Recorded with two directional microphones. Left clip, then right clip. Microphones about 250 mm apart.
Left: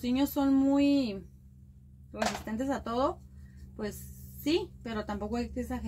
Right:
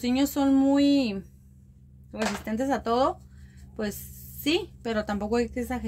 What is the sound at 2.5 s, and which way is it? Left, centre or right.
Speech, right.